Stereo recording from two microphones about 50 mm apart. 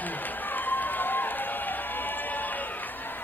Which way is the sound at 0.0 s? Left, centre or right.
Left.